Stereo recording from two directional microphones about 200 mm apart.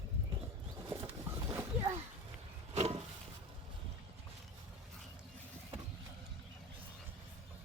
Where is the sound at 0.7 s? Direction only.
15° right (ahead or behind).